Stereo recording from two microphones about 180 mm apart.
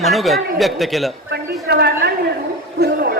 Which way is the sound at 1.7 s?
60° right (ahead or behind).